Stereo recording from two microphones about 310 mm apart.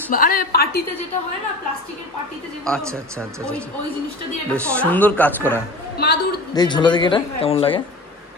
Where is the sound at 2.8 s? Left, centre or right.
Centre.